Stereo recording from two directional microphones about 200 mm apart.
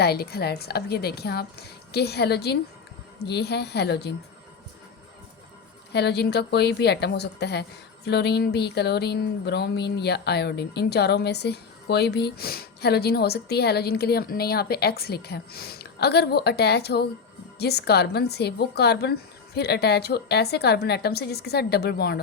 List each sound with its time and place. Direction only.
0.0 s a woman's voice: 50° left (ahead or behind)
5.9 s a woman's voice: 55° left (ahead or behind)